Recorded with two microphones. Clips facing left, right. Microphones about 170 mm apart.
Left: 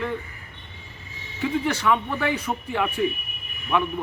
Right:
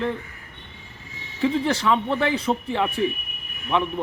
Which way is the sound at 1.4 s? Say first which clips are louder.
Right 2 dB; 30° right (ahead or behind).